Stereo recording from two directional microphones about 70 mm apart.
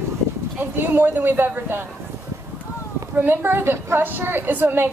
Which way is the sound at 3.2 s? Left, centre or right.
Right.